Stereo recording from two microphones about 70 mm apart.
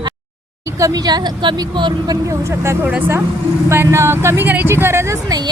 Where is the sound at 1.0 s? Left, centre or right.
Right.